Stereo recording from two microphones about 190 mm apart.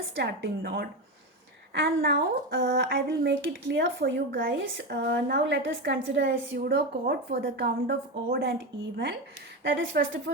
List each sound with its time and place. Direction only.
0.2 s speech: 60° right (ahead or behind)
9.7 s a woman's voice: 80° right